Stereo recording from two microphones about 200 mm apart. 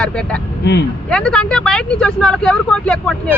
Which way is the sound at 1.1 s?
5° left (ahead or behind).